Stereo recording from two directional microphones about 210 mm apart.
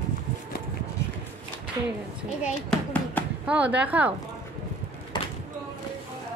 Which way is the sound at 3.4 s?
5° right (ahead or behind).